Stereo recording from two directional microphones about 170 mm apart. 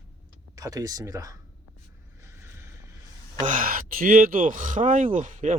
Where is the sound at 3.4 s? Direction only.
50° right (ahead or behind).